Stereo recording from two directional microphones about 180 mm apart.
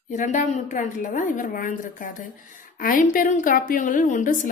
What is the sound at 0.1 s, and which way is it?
A woman's voice, 45° left (ahead or behind).